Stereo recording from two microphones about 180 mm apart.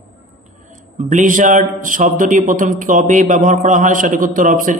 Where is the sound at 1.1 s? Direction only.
45° right (ahead or behind).